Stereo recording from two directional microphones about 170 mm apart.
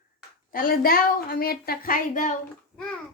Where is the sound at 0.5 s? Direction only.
60° left (ahead or behind).